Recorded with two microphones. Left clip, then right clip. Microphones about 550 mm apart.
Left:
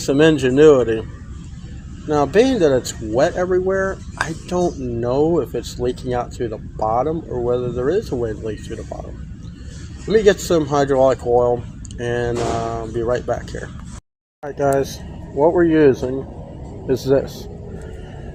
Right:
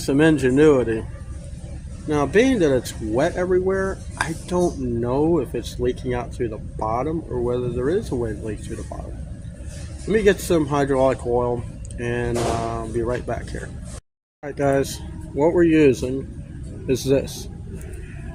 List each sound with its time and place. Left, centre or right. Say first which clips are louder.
0.0 s speech: left 3 dB; right
2.0 s speech: left 3 dB; right
10.1 s speech: left 4 dB; right